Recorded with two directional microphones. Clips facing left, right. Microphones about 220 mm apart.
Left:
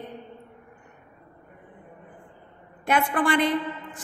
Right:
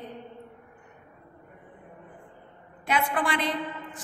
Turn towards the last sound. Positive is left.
turn(degrees=50)  # may be behind; listen again after turning